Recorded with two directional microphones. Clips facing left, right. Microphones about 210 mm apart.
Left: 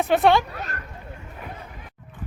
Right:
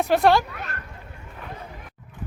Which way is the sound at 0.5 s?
40° left (ahead or behind).